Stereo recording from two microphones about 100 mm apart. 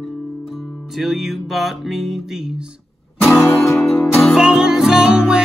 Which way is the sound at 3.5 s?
25° left (ahead or behind).